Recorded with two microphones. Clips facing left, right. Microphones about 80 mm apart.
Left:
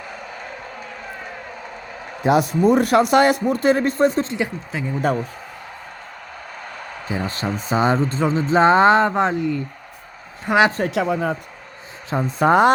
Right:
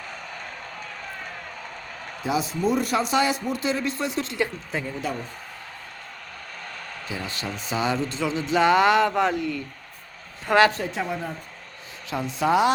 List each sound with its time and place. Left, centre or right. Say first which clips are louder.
0.1 s a sound: left 4 dB; centre
2.2 s speech: left 8 dB; left
4.3 s speech: left 2 dB; centre
4.7 s speech: left 2 dB; centre
7.1 s a woman's voice: left 8 dB; left; by 10.7 s centre
10.8 s speech: left 8 dB; left
12.1 s speech: left 6 dB; left